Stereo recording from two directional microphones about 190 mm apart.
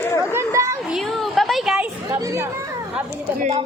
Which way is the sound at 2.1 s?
15° right (ahead or behind).